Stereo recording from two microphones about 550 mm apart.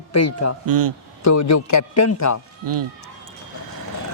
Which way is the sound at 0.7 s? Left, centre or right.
Right.